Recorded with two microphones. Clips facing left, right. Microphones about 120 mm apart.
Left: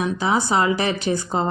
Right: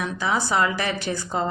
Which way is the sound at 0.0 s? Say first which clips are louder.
Left 4 dB; 20° left (ahead or behind).